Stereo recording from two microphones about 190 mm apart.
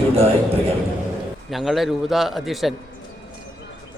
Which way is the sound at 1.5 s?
Centre (ahead or behind).